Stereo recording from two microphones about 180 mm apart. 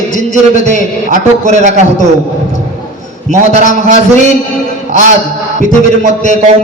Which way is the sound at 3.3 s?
40° right (ahead or behind).